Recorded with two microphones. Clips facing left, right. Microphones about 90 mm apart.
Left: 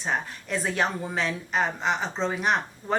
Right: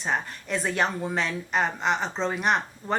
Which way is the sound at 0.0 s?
Centre (ahead or behind).